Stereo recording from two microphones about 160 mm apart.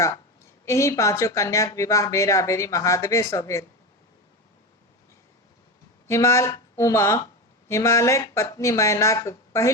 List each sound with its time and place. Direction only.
0.6 s speech: 20° left (ahead or behind)
6.1 s speech: 15° left (ahead or behind)